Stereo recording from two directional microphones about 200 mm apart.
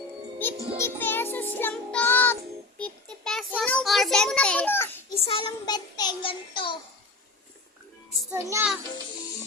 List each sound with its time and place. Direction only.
0.8 s music: 10° left (ahead or behind)
5.2 s child singing: 25° left (ahead or behind)
8.3 s a child's voice: 15° right (ahead or behind)